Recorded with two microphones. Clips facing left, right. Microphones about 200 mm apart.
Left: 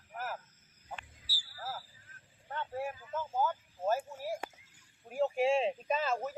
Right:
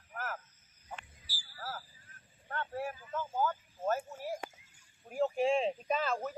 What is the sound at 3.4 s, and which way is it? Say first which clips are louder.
Speech: left 1 dB; 10° left (ahead or behind).